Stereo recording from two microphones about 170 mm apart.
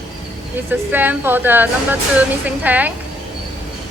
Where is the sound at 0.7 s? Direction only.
10° right (ahead or behind).